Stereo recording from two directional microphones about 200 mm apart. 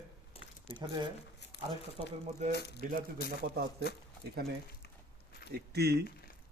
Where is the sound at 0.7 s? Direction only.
20° right (ahead or behind).